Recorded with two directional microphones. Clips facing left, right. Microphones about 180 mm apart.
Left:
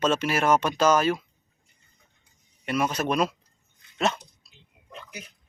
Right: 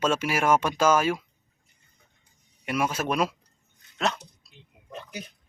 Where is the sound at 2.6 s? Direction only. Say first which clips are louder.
Left 1 dB; 10° right (ahead or behind).